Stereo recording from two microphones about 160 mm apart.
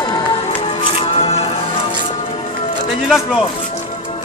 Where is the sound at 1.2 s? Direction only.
40° left (ahead or behind).